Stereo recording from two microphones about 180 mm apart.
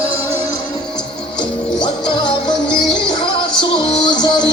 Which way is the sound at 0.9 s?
5° left (ahead or behind).